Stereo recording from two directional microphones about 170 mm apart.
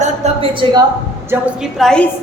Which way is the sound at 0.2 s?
40° right (ahead or behind).